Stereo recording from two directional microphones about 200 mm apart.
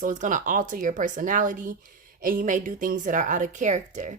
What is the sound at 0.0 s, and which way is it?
Speech, 40° right (ahead or behind).